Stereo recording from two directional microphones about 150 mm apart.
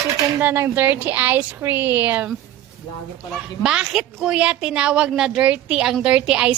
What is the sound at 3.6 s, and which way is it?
A woman's voice, 5° right (ahead or behind).